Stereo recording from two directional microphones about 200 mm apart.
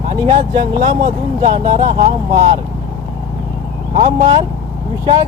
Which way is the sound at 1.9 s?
35° right (ahead or behind).